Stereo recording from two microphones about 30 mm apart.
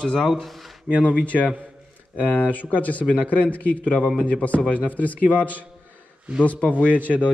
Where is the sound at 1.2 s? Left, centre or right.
Left.